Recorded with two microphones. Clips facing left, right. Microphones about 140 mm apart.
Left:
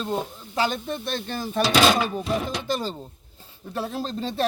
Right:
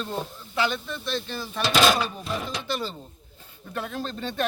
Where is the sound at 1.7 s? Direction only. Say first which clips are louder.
Left 1 dB; centre (ahead or behind).